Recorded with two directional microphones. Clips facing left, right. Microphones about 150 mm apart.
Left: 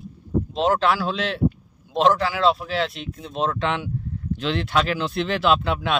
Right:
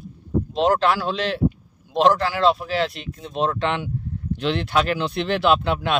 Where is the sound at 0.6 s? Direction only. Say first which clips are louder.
Right 1 dB; centre (ahead or behind).